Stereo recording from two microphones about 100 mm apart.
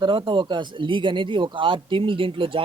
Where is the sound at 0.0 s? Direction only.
55° right (ahead or behind).